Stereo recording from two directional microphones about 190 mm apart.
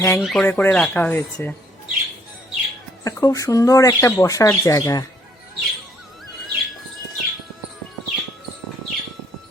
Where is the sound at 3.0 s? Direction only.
20° left (ahead or behind).